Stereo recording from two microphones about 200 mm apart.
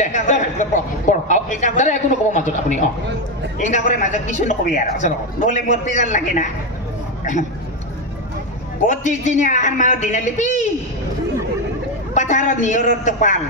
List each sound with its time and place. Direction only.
0.0 s a woman's voice: 35° left (ahead or behind)
8.8 s a woman's voice: 35° left (ahead or behind)
12.1 s a woman's voice: 35° left (ahead or behind)